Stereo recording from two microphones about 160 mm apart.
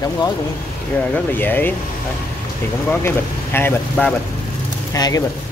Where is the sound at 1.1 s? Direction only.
10° left (ahead or behind).